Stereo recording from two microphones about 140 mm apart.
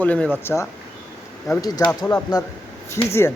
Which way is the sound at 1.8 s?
25° left (ahead or behind).